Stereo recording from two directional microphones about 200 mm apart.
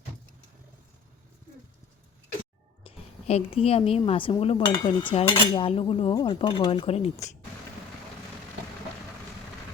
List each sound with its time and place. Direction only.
2.8 s speech: 30° left (ahead or behind)
4.7 s cutlery: 25° left (ahead or behind)